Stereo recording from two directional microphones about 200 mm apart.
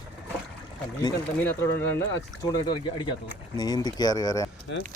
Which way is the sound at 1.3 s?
10° left (ahead or behind).